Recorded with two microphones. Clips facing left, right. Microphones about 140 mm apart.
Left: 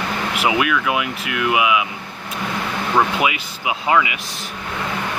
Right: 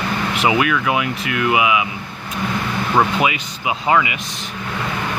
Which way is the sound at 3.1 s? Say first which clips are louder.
Right 1 dB; 5° left (ahead or behind).